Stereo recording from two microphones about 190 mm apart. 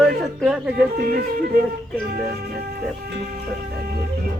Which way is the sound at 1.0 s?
55° right (ahead or behind).